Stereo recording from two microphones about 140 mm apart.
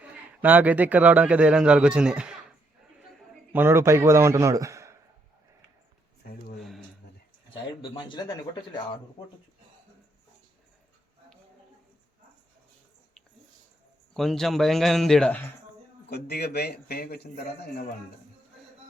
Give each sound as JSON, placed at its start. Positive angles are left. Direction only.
{"t": 0.0, "sound": "a man's voice", "side_deg": -10}
{"t": 3.5, "sound": "a man's voice", "side_deg": -15}
{"t": 6.2, "sound": "a sound", "side_deg": 90}
{"t": 6.6, "sound": "a sound", "side_deg": 0}
{"t": 7.8, "sound": "speech", "side_deg": 35}
{"t": 14.1, "sound": "speech", "side_deg": 0}
{"t": 16.3, "sound": "a man's voice", "side_deg": 90}